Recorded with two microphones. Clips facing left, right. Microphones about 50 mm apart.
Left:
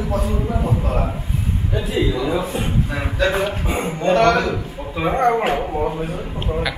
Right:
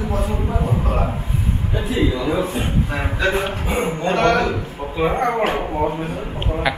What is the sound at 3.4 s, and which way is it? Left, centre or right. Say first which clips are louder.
Speech: even; centre.